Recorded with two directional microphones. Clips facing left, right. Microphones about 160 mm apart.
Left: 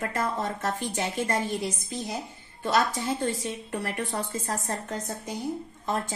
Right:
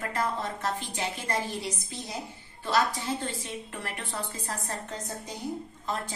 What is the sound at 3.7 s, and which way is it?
Speech, 40° left (ahead or behind).